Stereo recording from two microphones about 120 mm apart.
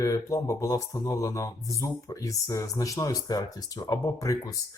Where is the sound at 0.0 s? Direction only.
25° left (ahead or behind).